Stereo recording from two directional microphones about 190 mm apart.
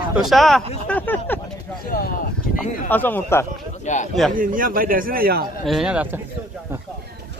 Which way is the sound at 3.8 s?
40° left (ahead or behind).